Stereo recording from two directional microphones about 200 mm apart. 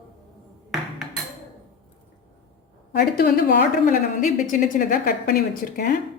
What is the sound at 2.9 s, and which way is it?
A woman's voice, 50° left (ahead or behind).